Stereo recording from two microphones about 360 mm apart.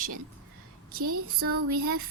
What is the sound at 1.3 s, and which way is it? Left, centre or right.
Speech, right.